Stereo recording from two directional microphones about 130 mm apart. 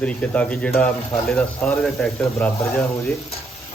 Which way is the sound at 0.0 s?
10° left (ahead or behind).